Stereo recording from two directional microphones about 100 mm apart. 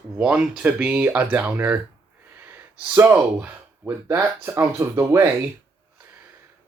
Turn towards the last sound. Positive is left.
turn(degrees=-25)  # may be behind; listen again after turning